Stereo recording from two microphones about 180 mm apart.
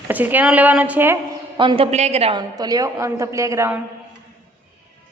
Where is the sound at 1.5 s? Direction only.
30° right (ahead or behind).